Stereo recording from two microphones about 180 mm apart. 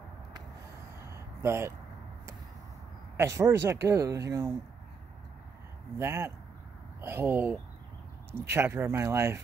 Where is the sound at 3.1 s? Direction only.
15° right (ahead or behind).